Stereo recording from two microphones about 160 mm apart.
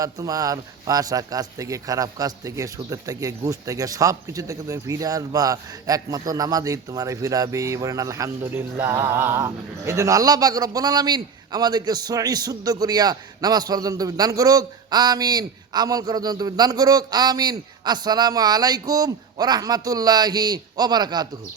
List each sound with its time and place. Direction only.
0.0 s a man's voice: 20° right (ahead or behind)